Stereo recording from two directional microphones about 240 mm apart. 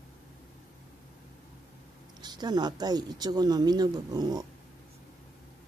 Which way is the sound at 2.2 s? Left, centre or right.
Centre.